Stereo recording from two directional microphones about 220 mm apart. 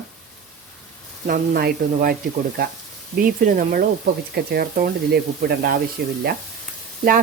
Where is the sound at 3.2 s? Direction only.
40° right (ahead or behind).